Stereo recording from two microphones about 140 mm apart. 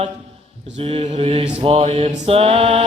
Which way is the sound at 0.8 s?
45° right (ahead or behind).